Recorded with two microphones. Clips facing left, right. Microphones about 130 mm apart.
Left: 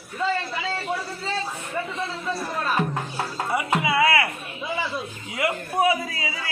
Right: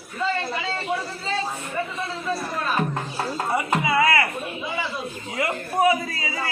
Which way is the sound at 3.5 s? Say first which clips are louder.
Even; 10° left (ahead or behind).